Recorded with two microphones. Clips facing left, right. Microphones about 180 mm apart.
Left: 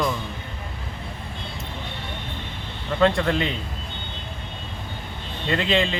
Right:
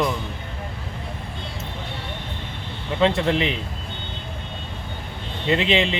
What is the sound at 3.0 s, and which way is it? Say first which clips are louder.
Speech: even; 20° right (ahead or behind).